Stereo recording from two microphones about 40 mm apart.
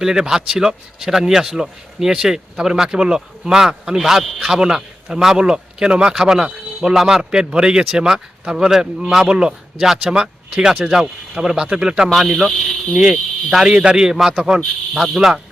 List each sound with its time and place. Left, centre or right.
0.0 s a man's voice: centre
4.2 s speech: centre
4.7 s a man's voice: centre
5.4 s speech: right; by 7.3 s centre
7.3 s a man's voice: right
9.8 s a man's voice: centre
10.1 s speech: centre
10.8 s a man's voice: centre
12.0 s speech: centre
13.0 s a man's voice: centre